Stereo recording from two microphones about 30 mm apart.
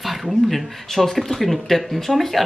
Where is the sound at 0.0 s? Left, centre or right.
Centre.